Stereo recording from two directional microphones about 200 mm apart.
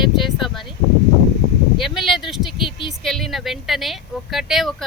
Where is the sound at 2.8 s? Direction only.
Centre (ahead or behind).